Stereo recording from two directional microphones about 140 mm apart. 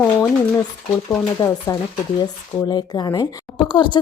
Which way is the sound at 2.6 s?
30° left (ahead or behind).